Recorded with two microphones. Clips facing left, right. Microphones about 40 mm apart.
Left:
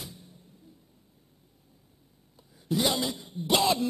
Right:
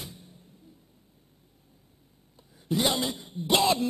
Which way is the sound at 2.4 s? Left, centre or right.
Centre.